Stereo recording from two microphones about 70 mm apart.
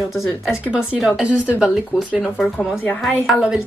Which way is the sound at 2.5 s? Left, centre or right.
Left.